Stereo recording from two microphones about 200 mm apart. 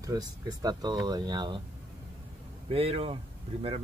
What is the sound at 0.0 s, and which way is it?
Speech, 20° right (ahead or behind).